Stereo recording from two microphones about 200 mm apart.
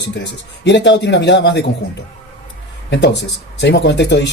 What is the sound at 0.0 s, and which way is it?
Speech, 60° left (ahead or behind).